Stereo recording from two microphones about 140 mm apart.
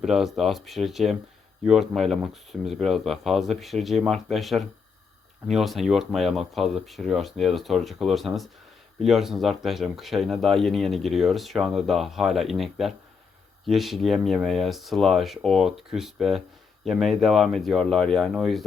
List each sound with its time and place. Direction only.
0.0 s speech: 5° right (ahead or behind)